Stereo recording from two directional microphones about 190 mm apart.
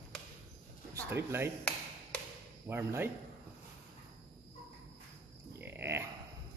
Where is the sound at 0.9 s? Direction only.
15° right (ahead or behind).